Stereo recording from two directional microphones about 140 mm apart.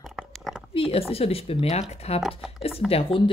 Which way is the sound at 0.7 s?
40° left (ahead or behind).